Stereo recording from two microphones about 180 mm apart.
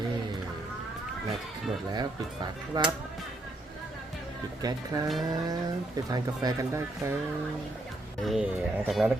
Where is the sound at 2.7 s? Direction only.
20° right (ahead or behind).